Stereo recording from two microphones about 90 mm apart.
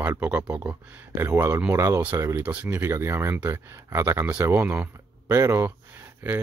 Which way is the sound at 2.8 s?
30° right (ahead or behind).